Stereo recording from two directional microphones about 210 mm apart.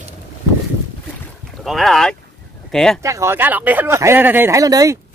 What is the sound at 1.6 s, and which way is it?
Speech, centre (ahead or behind).